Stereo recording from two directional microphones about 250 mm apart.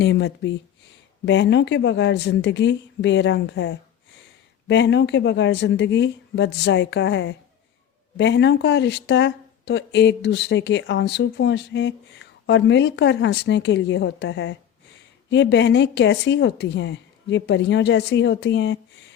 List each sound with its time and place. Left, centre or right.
0.0 s speech: left